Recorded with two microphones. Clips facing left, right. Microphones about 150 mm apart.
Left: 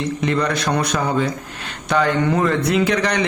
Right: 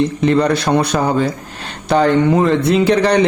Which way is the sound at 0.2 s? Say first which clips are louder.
Right 5 dB; 30° right (ahead or behind).